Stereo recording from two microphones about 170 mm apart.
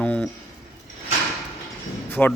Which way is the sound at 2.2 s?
Centre (ahead or behind).